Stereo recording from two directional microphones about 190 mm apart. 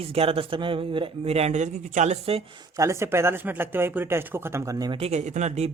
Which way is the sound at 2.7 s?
15° right (ahead or behind).